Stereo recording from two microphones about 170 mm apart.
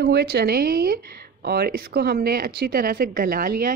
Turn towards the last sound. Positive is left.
turn(degrees=-55)  # may be behind; listen again after turning